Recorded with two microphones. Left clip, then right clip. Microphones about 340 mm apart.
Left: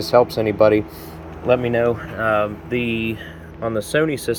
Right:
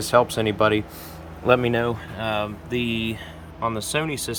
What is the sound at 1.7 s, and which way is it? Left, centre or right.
Speech, centre.